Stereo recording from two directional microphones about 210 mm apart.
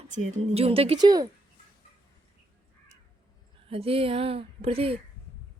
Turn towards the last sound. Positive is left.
turn(degrees=-25)  # may be behind; listen again after turning